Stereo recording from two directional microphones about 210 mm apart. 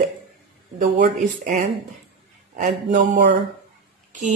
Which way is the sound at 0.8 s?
35° right (ahead or behind).